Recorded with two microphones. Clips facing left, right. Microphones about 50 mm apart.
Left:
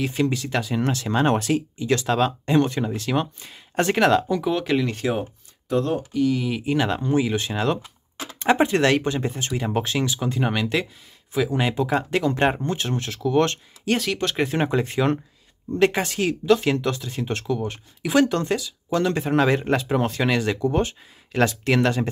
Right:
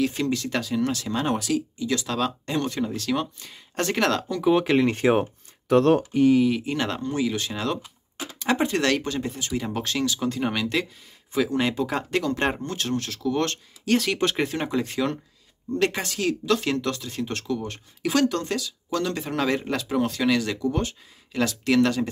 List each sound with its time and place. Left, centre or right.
0.0 s speech: centre
0.7 s speech: left; by 4.4 s centre
4.5 s speech: centre
5.7 s speech: right
6.6 s speech: centre
9.2 s speech: left
13.9 s speech: centre
14.5 s speech: left